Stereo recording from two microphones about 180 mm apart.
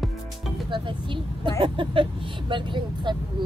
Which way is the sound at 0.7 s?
25° right (ahead or behind).